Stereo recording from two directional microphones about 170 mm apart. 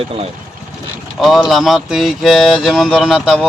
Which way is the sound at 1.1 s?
Centre (ahead or behind).